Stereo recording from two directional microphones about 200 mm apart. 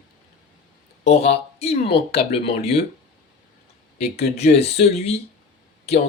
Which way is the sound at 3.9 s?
30° left (ahead or behind).